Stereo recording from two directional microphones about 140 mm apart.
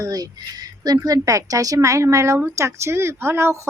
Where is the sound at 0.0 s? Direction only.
25° right (ahead or behind).